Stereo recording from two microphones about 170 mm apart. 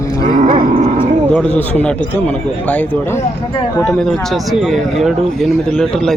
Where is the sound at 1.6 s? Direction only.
10° left (ahead or behind).